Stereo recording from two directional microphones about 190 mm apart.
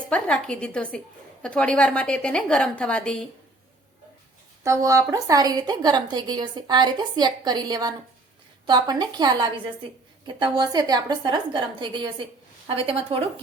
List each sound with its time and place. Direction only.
0.1 s a woman's voice: 5° left (ahead or behind)
4.6 s a woman's voice: 15° right (ahead or behind)